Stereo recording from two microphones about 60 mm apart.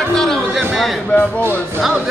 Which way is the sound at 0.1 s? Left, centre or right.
Centre.